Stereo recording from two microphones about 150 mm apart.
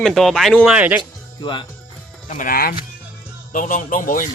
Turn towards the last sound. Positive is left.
turn(degrees=60)  # may be behind; listen again after turning